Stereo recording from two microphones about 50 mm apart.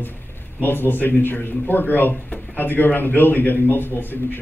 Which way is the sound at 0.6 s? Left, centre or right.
Left.